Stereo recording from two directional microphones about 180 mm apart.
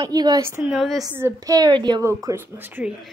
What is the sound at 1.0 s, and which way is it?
Speech, 15° right (ahead or behind).